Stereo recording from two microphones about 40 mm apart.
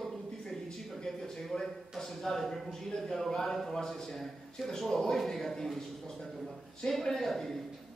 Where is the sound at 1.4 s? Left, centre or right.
Centre.